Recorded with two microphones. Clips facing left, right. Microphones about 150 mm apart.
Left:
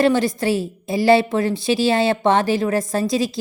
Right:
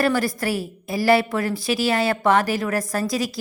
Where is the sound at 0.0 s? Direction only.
25° left (ahead or behind).